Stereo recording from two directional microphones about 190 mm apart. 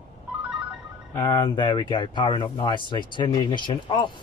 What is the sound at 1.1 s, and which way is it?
Speech, 20° left (ahead or behind).